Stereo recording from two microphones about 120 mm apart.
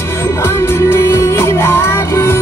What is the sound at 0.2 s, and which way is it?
Music, 20° left (ahead or behind).